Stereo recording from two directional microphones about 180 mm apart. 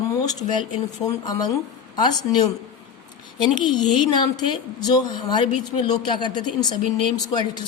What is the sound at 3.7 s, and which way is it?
A woman's voice, 25° left (ahead or behind).